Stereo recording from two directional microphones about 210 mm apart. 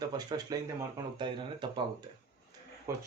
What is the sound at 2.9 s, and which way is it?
Speech, 15° right (ahead or behind).